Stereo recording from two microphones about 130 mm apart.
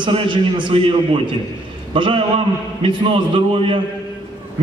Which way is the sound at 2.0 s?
40° right (ahead or behind).